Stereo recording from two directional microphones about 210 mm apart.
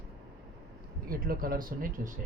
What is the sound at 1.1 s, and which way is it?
Speech, 45° right (ahead or behind).